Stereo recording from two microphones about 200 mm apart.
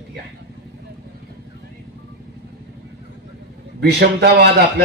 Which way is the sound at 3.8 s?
55° right (ahead or behind).